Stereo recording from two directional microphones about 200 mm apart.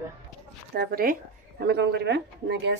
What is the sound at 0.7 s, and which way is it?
Speech, 45° right (ahead or behind).